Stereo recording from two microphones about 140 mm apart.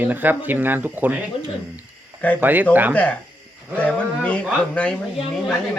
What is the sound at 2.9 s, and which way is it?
Speech, 10° left (ahead or behind).